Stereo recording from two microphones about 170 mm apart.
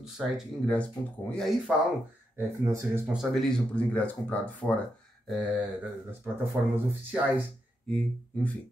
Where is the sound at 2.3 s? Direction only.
20° right (ahead or behind).